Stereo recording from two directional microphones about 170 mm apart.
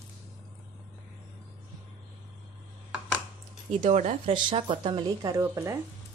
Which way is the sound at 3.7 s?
45° right (ahead or behind).